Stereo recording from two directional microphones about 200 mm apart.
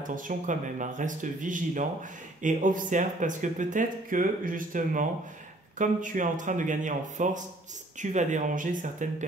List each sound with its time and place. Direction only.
0.0 s speech: 40° right (ahead or behind)